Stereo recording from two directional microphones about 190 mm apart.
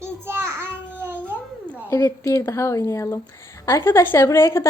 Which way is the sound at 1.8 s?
15° left (ahead or behind).